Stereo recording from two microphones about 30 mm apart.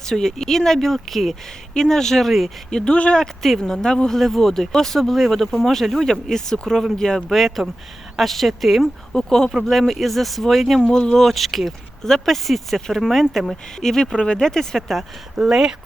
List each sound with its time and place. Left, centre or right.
0.1 s speech: centre
1.7 s speech: centre
2.6 s speech: left
4.2 s speech: centre
6.3 s speech: centre
7.0 s speech: left
7.3 s speech: centre
9.1 s speech: centre
9.6 s speech: centre
10.8 s speech: left
11.1 s speech: centre
14.8 s speech: centre
15.4 s speech: centre